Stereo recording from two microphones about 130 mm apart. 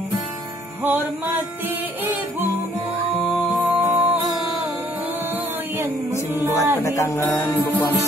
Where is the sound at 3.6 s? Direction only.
10° right (ahead or behind).